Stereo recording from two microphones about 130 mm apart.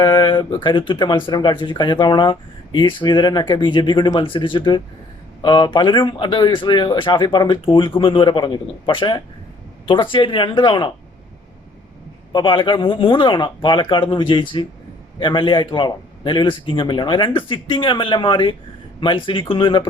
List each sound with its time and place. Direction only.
0.0 s speech: 40° left (ahead or behind)
12.3 s speech: 40° left (ahead or behind)